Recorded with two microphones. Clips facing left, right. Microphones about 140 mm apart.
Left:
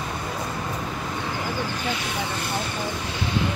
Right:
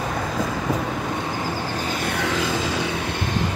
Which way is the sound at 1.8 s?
45° right (ahead or behind).